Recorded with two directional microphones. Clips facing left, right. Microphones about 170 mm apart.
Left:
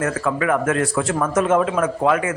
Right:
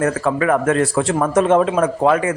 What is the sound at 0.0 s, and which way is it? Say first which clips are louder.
A man's voice: right 4 dB; 35° right (ahead or behind).